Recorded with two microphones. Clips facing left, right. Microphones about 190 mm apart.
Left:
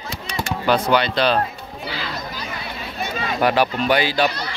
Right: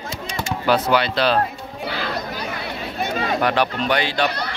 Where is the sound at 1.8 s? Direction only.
55° right (ahead or behind).